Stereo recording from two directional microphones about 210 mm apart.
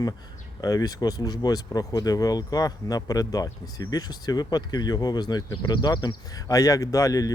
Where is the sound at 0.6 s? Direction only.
15° left (ahead or behind).